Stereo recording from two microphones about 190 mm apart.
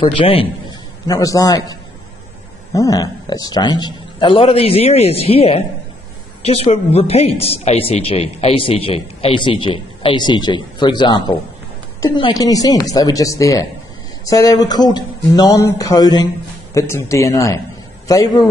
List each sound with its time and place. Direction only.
0.0 s speech: 30° left (ahead or behind)
1.0 s a man's voice: 20° left (ahead or behind)